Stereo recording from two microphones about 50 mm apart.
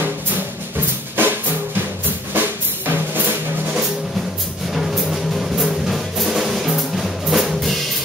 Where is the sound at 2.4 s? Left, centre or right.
Right.